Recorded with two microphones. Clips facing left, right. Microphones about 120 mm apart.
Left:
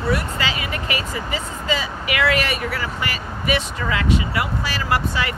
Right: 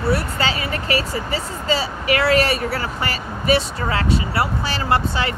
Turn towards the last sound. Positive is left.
turn(degrees=-30)  # may be behind; listen again after turning